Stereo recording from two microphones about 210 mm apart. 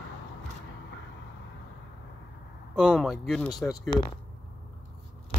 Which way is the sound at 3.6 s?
20° left (ahead or behind).